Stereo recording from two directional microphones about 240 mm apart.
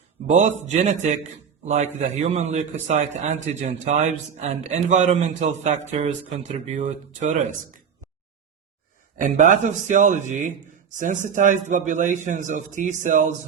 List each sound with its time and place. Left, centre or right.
0.3 s a man's voice: right
9.2 s a man's voice: right